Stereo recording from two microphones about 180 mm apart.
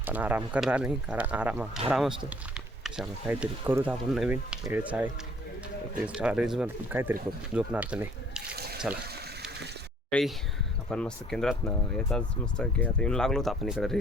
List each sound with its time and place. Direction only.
0.0 s speech: 10° right (ahead or behind)
6.1 s speech: 5° right (ahead or behind)
8.5 s water: 60° right (ahead or behind)
10.1 s speech: 5° left (ahead or behind)